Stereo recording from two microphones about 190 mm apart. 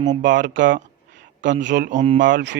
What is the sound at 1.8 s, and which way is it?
Speech, 40° right (ahead or behind).